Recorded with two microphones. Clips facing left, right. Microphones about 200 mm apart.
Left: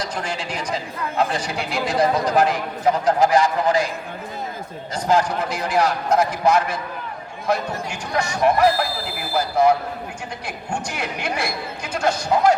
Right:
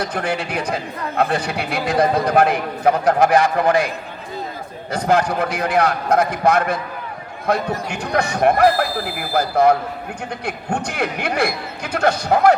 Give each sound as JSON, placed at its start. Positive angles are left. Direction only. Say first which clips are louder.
{"t": 0.0, "sound": "speech", "louder": "right 5 dB", "side_deg": -60}
{"t": 4.9, "sound": "speech", "louder": "right 2 dB", "side_deg": -60}